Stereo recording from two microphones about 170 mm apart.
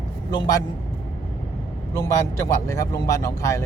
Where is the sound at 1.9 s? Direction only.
20° left (ahead or behind).